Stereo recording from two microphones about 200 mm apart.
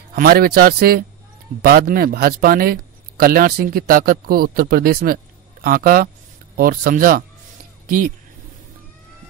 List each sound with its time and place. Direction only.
0.1 s speech: 45° right (ahead or behind)